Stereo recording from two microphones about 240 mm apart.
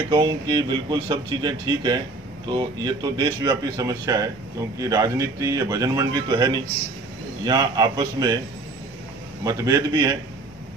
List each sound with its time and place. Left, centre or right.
0.1 s a man's voice: centre
9.4 s a man's voice: centre